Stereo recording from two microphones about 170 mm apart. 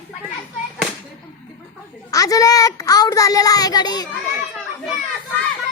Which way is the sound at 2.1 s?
20° left (ahead or behind).